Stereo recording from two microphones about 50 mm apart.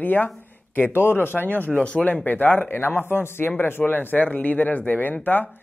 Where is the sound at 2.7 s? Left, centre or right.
Left.